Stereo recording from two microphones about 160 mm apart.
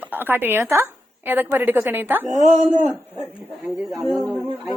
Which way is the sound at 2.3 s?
45° right (ahead or behind).